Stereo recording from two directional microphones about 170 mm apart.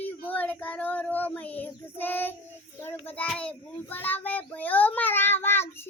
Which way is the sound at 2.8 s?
10° left (ahead or behind).